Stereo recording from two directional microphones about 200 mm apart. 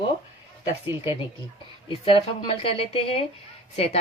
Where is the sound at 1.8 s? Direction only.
25° left (ahead or behind).